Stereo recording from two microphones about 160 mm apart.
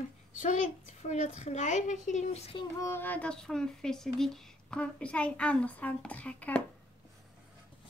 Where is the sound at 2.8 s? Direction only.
15° left (ahead or behind).